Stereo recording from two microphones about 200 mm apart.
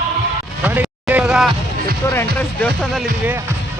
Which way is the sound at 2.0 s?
10° left (ahead or behind).